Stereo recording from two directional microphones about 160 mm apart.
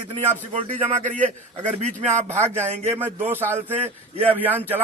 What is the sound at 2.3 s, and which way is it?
Speech, 45° right (ahead or behind).